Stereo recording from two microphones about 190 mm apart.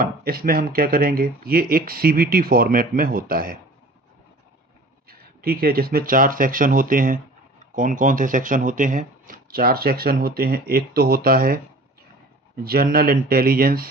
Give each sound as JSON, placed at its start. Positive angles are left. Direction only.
{"t": 0.0, "sound": "speech", "side_deg": -50}
{"t": 5.0, "sound": "speech", "side_deg": -50}
{"t": 12.6, "sound": "speech", "side_deg": -50}